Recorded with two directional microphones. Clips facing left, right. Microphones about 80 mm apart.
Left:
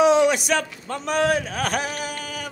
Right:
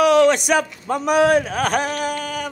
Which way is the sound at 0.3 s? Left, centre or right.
Centre.